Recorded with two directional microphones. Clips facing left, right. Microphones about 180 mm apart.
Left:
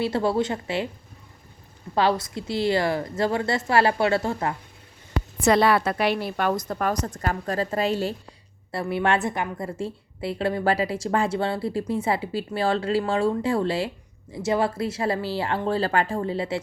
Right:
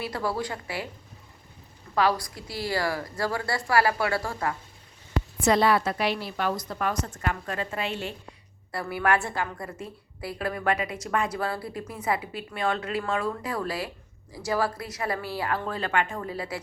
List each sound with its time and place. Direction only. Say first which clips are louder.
0.0 s a woman's voice: left 7 dB; 25° left (ahead or behind)
2.0 s a woman's voice: left 2 dB; 25° left (ahead or behind)
5.4 s a woman's voice: left 3 dB; 65° left (ahead or behind); by 8.4 s 35° left (ahead or behind)
8.7 s a woman's voice: left 2 dB; 25° left (ahead or behind)